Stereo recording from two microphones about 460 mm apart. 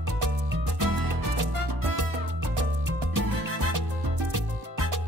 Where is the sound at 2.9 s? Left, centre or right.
Right.